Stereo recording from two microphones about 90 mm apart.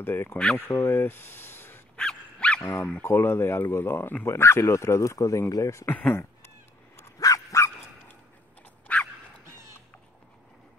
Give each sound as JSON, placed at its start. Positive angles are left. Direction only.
{"t": 0.0, "sound": "speech", "side_deg": 25}
{"t": 2.0, "sound": "dog", "side_deg": 10}
{"t": 2.8, "sound": "speech", "side_deg": 15}
{"t": 3.1, "sound": "speech", "side_deg": 25}
{"t": 5.9, "sound": "speech", "side_deg": 15}
{"t": 7.0, "sound": "dog", "side_deg": 35}
{"t": 8.9, "sound": "dog", "side_deg": 15}